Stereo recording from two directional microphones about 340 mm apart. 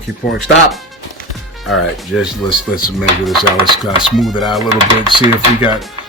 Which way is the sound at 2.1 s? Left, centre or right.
Centre.